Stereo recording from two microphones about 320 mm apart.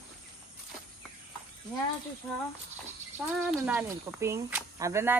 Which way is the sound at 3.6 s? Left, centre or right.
Centre.